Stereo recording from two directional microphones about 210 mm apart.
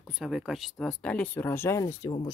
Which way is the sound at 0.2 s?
Centre (ahead or behind).